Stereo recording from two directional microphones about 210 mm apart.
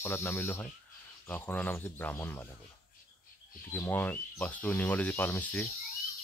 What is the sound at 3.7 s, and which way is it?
Speech, 10° left (ahead or behind).